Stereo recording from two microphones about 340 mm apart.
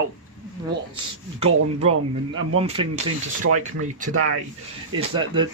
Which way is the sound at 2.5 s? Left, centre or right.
Centre.